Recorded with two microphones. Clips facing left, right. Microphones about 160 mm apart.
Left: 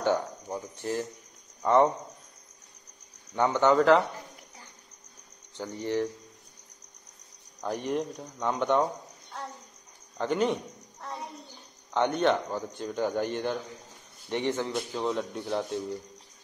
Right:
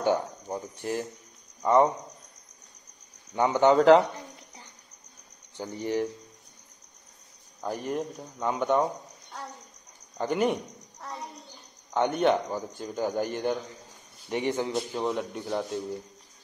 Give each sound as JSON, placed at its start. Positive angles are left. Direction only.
{"t": 0.0, "sound": "a sound", "side_deg": -15}
{"t": 1.6, "sound": "speech", "side_deg": -5}
{"t": 3.3, "sound": "speech", "side_deg": -15}
{"t": 5.6, "sound": "speech", "side_deg": -10}
{"t": 7.6, "sound": "speech", "side_deg": 0}
{"t": 10.1, "sound": "speech", "side_deg": -10}